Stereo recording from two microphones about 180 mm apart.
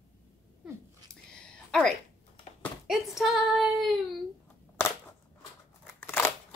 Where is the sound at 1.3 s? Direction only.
5° left (ahead or behind).